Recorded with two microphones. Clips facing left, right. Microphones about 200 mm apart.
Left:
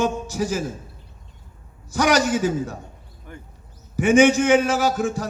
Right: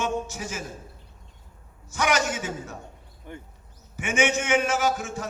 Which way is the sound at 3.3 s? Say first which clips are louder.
Right 1 dB; 20° right (ahead or behind).